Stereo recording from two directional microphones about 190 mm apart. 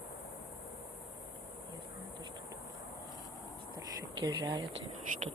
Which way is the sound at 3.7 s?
20° right (ahead or behind).